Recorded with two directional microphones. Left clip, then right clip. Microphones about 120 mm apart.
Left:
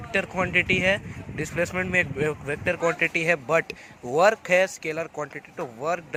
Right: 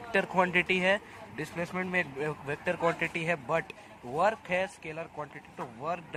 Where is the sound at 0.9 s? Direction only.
20° left (ahead or behind).